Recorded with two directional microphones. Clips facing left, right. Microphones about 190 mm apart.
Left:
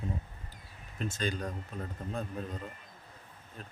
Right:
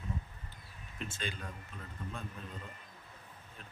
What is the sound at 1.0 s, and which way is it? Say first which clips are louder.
A man's voice: left 8 dB; 40° left (ahead or behind).